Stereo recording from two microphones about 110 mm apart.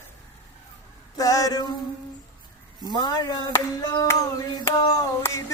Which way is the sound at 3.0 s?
40° left (ahead or behind).